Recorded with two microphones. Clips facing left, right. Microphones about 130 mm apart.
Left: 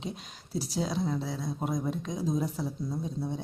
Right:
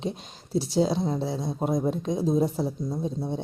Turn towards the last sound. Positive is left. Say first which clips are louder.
# right 4 dB
turn(degrees=-25)  # may be behind; listen again after turning